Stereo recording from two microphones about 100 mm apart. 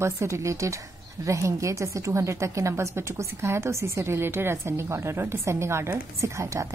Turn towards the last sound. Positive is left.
turn(degrees=-30)  # may be behind; listen again after turning